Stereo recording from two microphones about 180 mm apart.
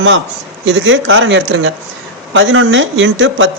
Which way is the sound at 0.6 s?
90° right.